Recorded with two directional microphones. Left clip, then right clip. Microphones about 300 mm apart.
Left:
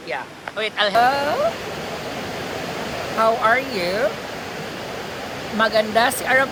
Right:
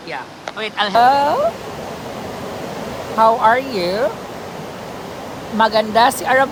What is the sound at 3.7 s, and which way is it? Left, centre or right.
Speech, centre.